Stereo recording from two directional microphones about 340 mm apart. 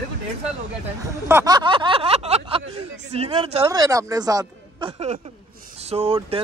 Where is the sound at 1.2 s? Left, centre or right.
Centre.